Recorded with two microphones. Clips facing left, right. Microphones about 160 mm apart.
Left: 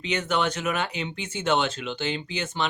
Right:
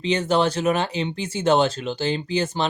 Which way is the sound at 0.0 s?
30° right (ahead or behind).